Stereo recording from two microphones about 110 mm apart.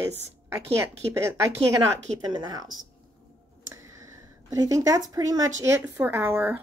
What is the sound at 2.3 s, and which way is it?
Speech, 35° right (ahead or behind).